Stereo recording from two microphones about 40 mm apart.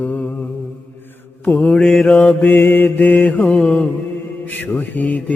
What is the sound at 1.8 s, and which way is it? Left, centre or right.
Mantra, centre.